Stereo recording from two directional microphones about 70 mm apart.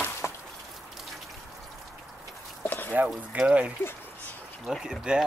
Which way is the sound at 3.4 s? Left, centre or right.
Centre.